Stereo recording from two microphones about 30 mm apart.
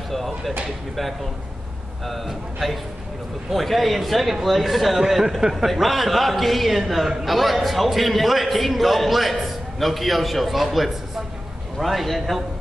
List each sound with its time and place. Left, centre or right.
0.1 s a man's voice: centre
2.0 s a man's voice: centre